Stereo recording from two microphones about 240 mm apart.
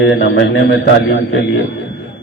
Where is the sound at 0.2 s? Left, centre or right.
Left.